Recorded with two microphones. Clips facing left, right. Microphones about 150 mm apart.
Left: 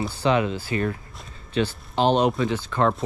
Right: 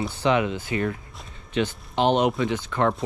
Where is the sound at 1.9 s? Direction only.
20° right (ahead or behind).